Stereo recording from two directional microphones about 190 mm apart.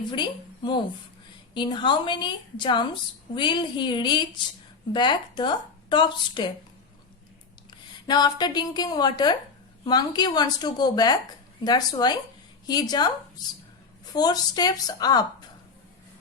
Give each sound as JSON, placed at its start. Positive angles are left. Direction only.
{"t": 0.1, "sound": "a woman's voice", "side_deg": 25}
{"t": 8.0, "sound": "a woman's voice", "side_deg": 20}
{"t": 14.1, "sound": "a woman's voice", "side_deg": 20}